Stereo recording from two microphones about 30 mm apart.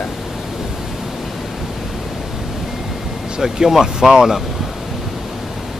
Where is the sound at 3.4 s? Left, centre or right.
Centre.